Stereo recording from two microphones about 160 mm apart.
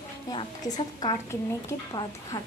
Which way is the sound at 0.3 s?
25° left (ahead or behind).